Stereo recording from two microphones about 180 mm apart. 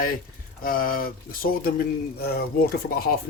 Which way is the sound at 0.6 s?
55° left (ahead or behind).